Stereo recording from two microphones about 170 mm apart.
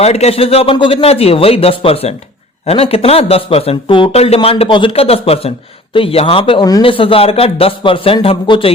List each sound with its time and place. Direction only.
0.0 s speech: 40° left (ahead or behind)